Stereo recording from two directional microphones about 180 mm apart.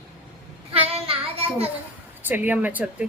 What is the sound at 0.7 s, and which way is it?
Child singing, 35° right (ahead or behind).